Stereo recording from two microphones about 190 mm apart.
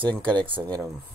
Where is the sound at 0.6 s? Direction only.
10° right (ahead or behind).